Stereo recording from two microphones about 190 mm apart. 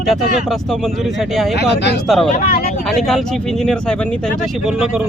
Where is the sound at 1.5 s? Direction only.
60° left (ahead or behind).